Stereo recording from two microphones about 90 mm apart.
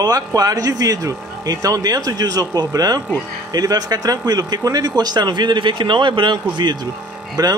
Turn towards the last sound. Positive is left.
turn(degrees=-45)  # may be behind; listen again after turning